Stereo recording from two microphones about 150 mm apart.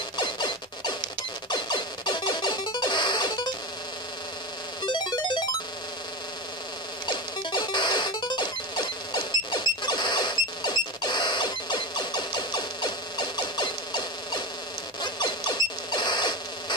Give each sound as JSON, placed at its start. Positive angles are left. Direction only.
{"t": 0.2, "sound": "music", "side_deg": 30}
{"t": 4.8, "sound": "cacophony", "side_deg": 30}
{"t": 7.1, "sound": "music", "side_deg": 30}
{"t": 15.0, "sound": "a sound", "side_deg": 30}